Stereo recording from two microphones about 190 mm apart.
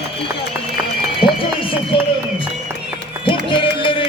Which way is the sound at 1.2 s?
25° left (ahead or behind).